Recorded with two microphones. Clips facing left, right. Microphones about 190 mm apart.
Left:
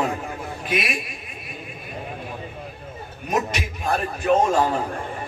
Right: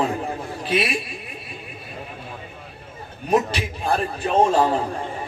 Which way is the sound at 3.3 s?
30° right (ahead or behind).